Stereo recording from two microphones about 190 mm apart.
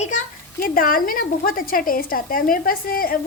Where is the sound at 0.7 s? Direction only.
50° left (ahead or behind).